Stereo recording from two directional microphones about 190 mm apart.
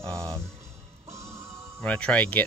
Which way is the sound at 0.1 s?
15° right (ahead or behind).